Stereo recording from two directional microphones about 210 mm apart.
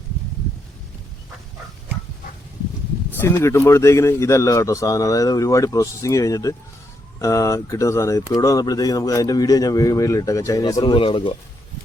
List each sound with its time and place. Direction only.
3.1 s a man's voice: 10° left (ahead or behind)